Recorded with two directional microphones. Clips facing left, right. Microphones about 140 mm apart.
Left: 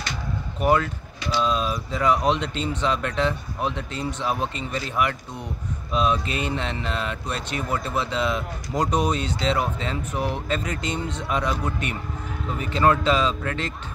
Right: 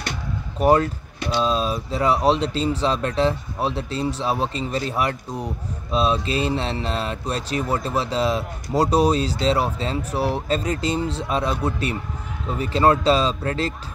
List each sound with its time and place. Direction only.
0.6 s speech: 35° right (ahead or behind)